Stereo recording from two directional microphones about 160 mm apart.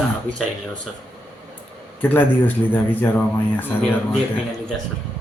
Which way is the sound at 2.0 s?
10° left (ahead or behind).